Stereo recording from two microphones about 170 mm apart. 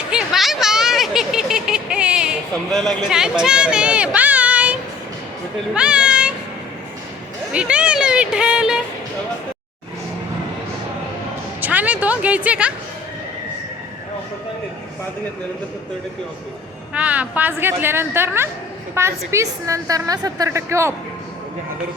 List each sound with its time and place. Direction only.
0.1 s a sound: 5° right (ahead or behind)
5.7 s speech: 5° right (ahead or behind)
7.5 s speech: 5° right (ahead or behind)
11.6 s a woman's voice: 10° right (ahead or behind)
16.9 s a woman's voice: 10° right (ahead or behind)